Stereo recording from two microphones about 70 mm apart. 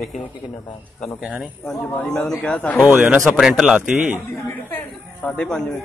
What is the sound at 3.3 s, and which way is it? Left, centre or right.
Speech, centre.